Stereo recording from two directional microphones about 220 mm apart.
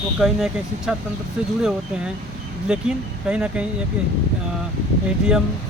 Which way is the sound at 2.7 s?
5° right (ahead or behind).